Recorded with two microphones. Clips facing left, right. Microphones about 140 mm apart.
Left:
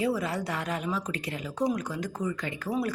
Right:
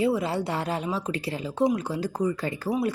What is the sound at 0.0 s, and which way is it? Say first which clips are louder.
A woman's voice: right 4 dB; 25° right (ahead or behind).